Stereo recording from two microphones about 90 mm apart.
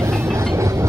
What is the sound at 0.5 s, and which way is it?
Train, 30° right (ahead or behind).